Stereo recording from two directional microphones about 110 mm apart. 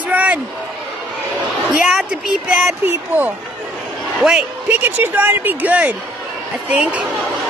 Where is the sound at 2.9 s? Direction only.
15° right (ahead or behind).